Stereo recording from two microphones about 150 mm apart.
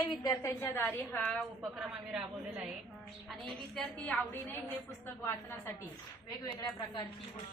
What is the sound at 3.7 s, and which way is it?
Speech, 10° left (ahead or behind).